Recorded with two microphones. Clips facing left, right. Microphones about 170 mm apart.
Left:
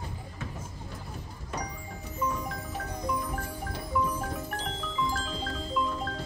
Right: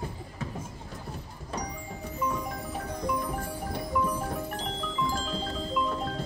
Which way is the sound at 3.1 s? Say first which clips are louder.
Right 1 dB; 10° right (ahead or behind).